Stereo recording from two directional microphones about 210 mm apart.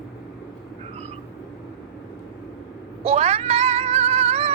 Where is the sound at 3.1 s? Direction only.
30° right (ahead or behind).